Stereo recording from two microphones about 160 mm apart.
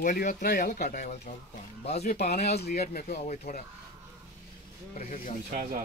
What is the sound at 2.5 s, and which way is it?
Speech, 80° left.